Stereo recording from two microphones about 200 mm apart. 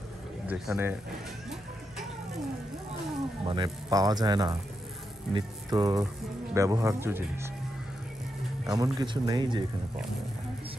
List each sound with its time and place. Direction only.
0.5 s speech: 10° right (ahead or behind)
3.4 s speech: 20° right (ahead or behind)
8.6 s speech: 20° right (ahead or behind)